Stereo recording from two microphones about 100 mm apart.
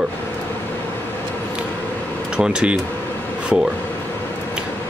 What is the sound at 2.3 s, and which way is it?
Speech, 5° right (ahead or behind).